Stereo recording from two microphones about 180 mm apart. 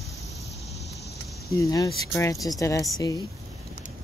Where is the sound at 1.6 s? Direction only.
20° left (ahead or behind).